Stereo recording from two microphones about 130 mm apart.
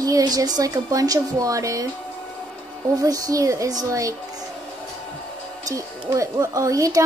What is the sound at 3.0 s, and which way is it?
A woman's voice, 25° right (ahead or behind).